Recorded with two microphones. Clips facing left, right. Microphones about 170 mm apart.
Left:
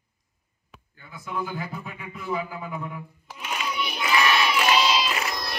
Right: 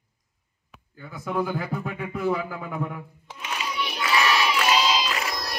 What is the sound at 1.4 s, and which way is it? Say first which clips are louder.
Music: right 5 dB; 65° right (ahead or behind).